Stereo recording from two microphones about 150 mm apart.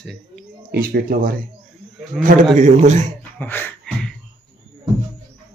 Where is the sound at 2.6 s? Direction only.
50° right (ahead or behind).